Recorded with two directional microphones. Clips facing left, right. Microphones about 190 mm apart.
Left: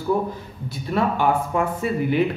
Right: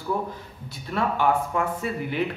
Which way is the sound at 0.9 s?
15° left (ahead or behind).